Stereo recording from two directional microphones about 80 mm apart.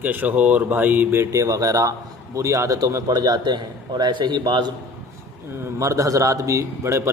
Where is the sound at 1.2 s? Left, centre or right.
Right.